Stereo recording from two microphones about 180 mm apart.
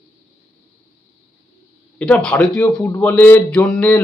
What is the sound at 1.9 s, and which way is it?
A man's voice, 5° left (ahead or behind).